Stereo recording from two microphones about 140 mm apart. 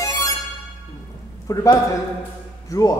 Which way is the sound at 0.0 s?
25° left (ahead or behind).